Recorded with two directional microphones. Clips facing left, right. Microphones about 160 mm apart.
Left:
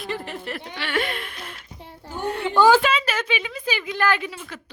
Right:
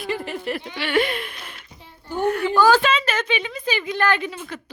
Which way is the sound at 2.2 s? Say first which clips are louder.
Even; 25° left (ahead or behind).